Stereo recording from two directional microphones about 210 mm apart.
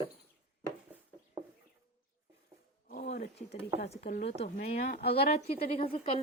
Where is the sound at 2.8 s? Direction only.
35° left (ahead or behind).